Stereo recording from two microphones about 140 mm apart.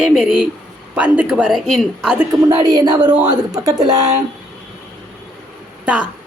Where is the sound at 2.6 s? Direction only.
30° right (ahead or behind).